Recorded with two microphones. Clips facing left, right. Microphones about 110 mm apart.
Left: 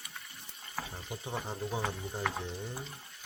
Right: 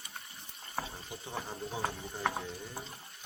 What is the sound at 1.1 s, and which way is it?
Speech, 20° left (ahead or behind).